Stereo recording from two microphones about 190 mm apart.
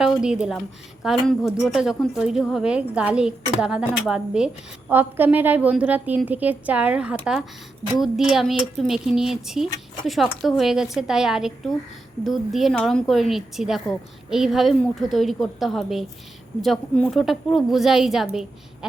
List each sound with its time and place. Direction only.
0.2 s a woman's voice: 5° right (ahead or behind)